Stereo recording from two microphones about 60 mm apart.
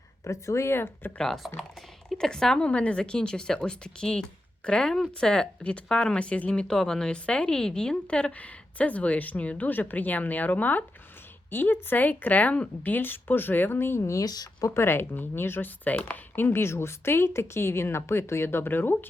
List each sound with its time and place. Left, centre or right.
0.3 s speech: left
1.2 s speech: centre; by 14.0 s left
14.0 s speech: left
14.7 s speech: left
15.8 s speech: left
16.3 s speech: left